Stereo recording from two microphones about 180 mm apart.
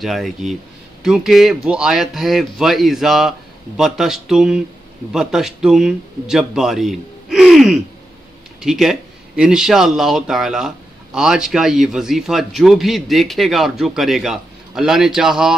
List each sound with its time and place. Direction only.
0.0 s a man's voice: centre (ahead or behind)